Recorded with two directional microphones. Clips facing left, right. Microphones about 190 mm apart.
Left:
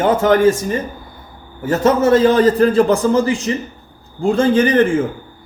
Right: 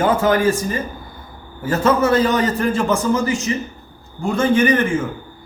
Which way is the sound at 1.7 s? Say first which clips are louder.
Left 3 dB; 20° left (ahead or behind).